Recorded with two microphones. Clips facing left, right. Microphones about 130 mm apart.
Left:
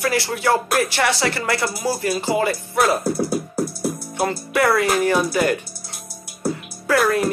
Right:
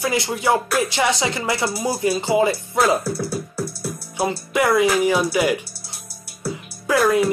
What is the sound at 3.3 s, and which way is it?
Music, 45° left (ahead or behind).